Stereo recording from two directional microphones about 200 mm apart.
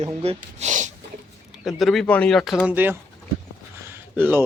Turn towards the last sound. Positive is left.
turn(degrees=-10)  # may be behind; listen again after turning